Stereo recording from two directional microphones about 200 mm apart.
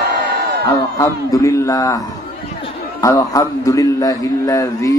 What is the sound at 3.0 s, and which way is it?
Mantra, 15° left (ahead or behind).